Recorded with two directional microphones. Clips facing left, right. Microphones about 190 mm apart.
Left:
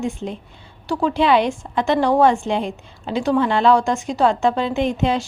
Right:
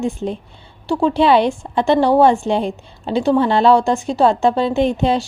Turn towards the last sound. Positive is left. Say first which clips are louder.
# right 3 dB
turn(degrees=-35)  # may be behind; listen again after turning